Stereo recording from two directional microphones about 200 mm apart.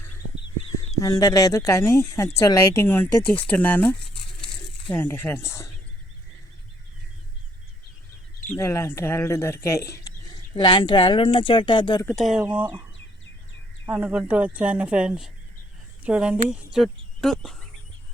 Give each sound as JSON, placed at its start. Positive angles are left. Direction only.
{"t": 0.9, "sound": "speech", "side_deg": 15}
{"t": 8.4, "sound": "speech", "side_deg": 15}
{"t": 12.0, "sound": "speech", "side_deg": 0}
{"t": 13.8, "sound": "speech", "side_deg": -10}